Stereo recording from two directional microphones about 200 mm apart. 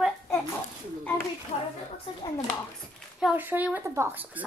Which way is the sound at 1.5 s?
30° left (ahead or behind).